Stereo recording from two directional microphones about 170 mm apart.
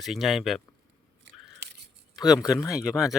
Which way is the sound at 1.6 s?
80° right.